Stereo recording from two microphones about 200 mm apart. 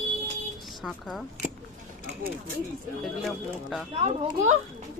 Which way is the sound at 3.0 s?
Centre (ahead or behind).